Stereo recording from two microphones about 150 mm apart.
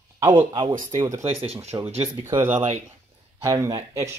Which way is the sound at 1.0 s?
20° right (ahead or behind).